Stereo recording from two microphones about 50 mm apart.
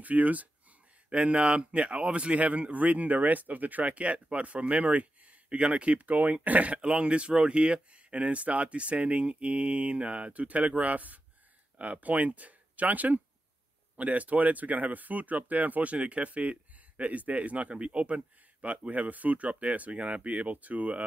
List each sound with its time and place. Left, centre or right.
0.0 s speech: right
1.1 s speech: right